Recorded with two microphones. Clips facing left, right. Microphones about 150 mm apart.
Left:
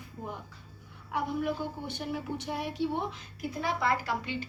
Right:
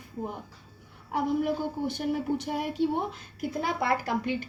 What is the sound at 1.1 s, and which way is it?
A woman's voice, 45° right (ahead or behind).